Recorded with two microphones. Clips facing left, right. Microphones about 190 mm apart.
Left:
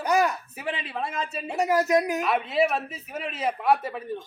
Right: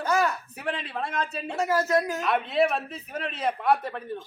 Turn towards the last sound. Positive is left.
turn(degrees=5)  # may be behind; listen again after turning